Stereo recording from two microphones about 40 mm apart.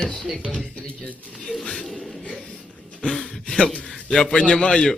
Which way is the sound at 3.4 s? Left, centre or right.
Left.